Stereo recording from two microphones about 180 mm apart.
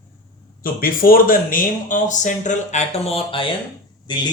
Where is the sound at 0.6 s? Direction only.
50° left (ahead or behind).